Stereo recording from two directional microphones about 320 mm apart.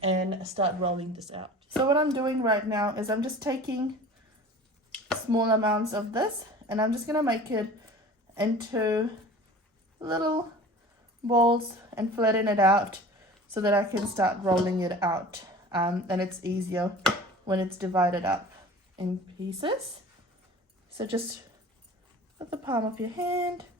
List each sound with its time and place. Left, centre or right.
0.0 s speech: centre
5.3 s speech: centre
22.4 s speech: centre